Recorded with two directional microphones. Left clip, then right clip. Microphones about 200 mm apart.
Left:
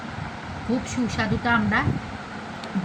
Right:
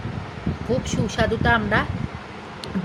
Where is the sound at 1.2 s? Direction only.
60° right (ahead or behind).